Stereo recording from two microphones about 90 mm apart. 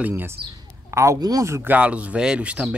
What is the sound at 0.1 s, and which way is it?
Speech, 30° right (ahead or behind).